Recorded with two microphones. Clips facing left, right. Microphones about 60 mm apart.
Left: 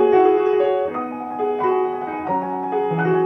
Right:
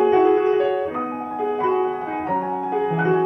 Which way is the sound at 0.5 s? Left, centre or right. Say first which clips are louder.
Left 2 dB; left.